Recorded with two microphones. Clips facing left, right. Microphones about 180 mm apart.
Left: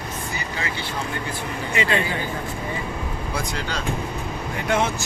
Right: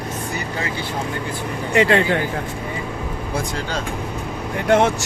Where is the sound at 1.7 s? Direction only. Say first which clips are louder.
Right 8 dB; 65° right (ahead or behind).